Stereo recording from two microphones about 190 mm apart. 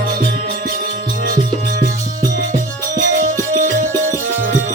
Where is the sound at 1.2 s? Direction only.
45° right (ahead or behind).